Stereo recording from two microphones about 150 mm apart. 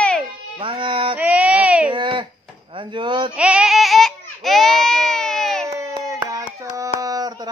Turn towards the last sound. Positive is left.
turn(degrees=-25)  # may be behind; listen again after turning